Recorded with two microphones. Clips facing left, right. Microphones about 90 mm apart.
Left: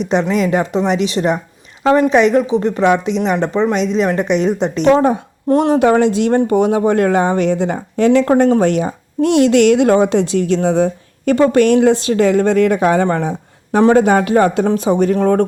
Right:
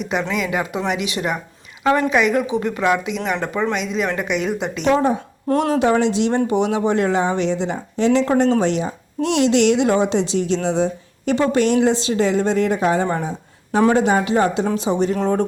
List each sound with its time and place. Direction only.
0.1 s a woman's voice: 35° left (ahead or behind)
4.9 s speech: 50° left (ahead or behind)
13.9 s speech: 55° left (ahead or behind)